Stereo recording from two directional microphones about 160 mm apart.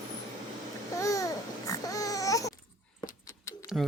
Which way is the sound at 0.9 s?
20° left (ahead or behind).